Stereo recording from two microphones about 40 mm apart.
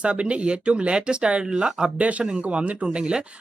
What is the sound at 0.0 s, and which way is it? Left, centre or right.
Speech, right.